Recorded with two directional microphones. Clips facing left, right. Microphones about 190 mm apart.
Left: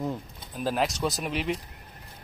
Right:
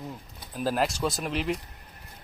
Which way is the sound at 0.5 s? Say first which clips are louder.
Even; centre (ahead or behind).